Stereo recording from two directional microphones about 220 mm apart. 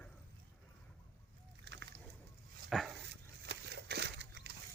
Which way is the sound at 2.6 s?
Centre (ahead or behind).